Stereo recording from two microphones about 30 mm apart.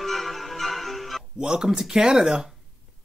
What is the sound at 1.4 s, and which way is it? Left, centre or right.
Speech, right.